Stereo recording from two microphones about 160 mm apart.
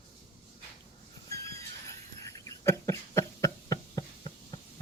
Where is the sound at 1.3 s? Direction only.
20° left (ahead or behind).